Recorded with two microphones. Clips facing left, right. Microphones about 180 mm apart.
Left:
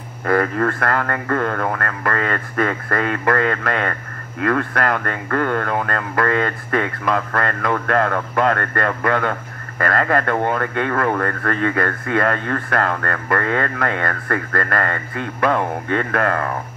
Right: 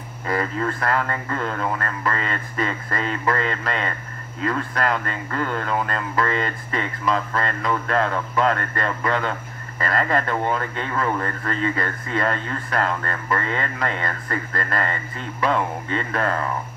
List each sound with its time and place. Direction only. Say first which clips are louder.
0.2 s speech: left 6 dB; 55° left (ahead or behind)